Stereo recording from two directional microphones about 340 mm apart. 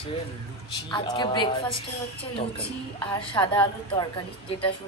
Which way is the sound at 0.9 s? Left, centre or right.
Centre.